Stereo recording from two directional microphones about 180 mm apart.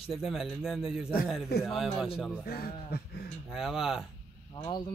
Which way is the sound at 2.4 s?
55° left (ahead or behind).